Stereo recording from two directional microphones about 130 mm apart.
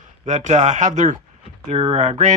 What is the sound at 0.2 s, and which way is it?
Speech, 65° right (ahead or behind).